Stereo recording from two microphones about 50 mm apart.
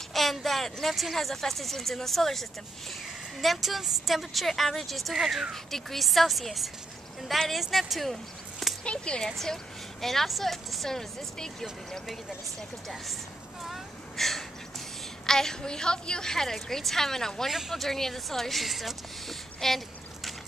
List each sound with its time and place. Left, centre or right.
0.1 s a woman's voice: centre
8.8 s a woman's voice: centre
13.7 s a sound: centre
15.2 s a woman's voice: centre
17.5 s a woman's voice: centre